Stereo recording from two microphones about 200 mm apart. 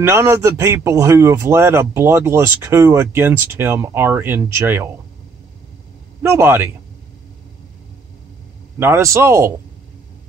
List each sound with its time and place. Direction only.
0.0 s a man's voice: 15° right (ahead or behind)
6.2 s a man's voice: 10° right (ahead or behind)
8.7 s a man's voice: 10° right (ahead or behind)